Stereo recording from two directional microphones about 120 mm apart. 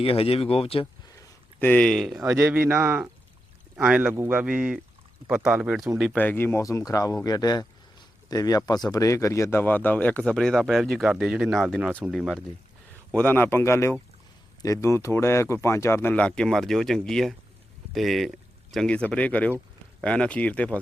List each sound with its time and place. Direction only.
0.0 s speech: 50° left (ahead or behind)
1.5 s speech: 15° left (ahead or behind)
2.3 s a man's voice: 15° right (ahead or behind)
6.1 s speech: 15° left (ahead or behind)
13.1 s speech: 15° left (ahead or behind)